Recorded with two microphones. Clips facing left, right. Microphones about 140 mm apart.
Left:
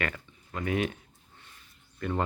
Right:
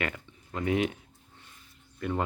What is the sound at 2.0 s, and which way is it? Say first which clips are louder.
Speech: right 1 dB; 15° right (ahead or behind).